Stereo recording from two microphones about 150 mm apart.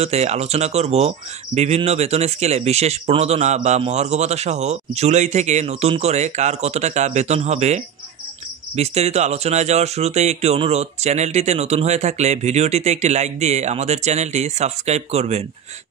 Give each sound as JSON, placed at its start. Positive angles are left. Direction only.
{"t": 0.0, "sound": "speech", "side_deg": -45}